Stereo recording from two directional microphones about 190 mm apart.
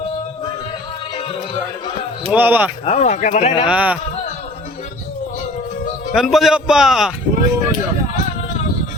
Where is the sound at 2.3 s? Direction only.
10° right (ahead or behind).